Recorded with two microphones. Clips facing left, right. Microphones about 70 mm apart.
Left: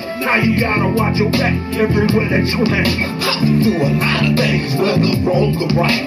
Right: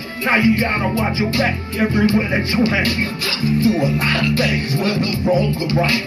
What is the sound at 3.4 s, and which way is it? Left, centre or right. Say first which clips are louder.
Speech: left 1 dB; left.